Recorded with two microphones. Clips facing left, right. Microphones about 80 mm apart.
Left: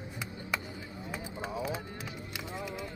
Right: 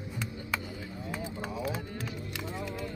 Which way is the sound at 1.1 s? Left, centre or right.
Centre.